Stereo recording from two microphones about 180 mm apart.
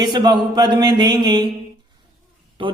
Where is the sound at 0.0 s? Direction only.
25° right (ahead or behind).